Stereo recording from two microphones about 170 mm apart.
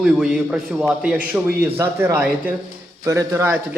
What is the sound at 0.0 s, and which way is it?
A man's voice, 5° right (ahead or behind).